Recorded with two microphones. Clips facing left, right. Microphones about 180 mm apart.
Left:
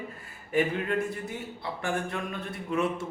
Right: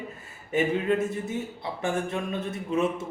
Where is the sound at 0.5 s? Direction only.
20° right (ahead or behind).